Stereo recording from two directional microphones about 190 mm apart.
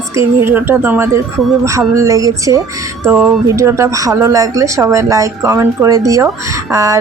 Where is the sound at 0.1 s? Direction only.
15° right (ahead or behind).